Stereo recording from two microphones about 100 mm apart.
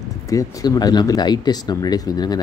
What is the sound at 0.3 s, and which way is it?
Speech, 35° left (ahead or behind).